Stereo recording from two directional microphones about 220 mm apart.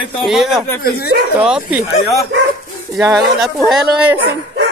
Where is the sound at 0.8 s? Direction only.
45° left (ahead or behind).